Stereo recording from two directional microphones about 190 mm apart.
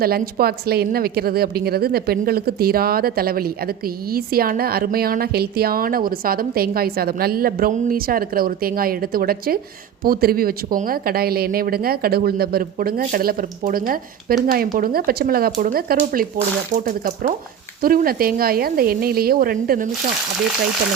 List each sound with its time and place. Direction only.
0.0 s a woman's voice: 55° right (ahead or behind)